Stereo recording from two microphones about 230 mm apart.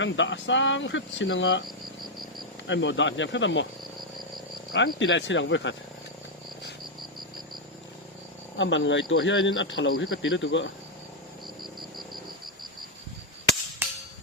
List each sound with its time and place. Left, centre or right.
0.0 s speech: left
2.6 s speech: left
4.9 s speech: left
8.5 s speech: left
13.8 s a sound: centre